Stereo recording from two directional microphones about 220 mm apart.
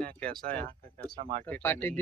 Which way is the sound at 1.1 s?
35° right (ahead or behind).